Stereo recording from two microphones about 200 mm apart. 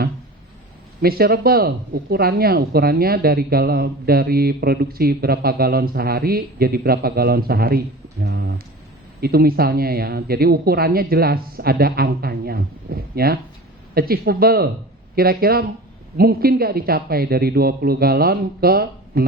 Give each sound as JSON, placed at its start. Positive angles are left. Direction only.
{"t": 1.0, "sound": "speech", "side_deg": -50}